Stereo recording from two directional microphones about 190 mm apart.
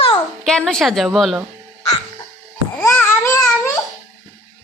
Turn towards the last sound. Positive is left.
turn(degrees=15)  # may be behind; listen again after turning